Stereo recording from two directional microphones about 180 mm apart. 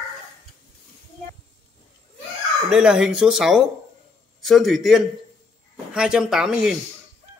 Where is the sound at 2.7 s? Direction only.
5° right (ahead or behind).